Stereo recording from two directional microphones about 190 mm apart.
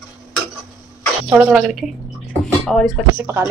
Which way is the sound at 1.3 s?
5° right (ahead or behind).